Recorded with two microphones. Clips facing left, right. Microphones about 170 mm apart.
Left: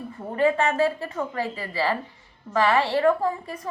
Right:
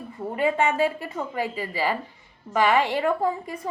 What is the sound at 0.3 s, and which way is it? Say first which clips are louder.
A woman's voice: left 1 dB; 15° right (ahead or behind).